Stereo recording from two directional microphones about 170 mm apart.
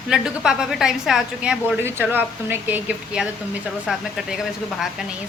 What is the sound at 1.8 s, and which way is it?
A woman's voice, 15° right (ahead or behind).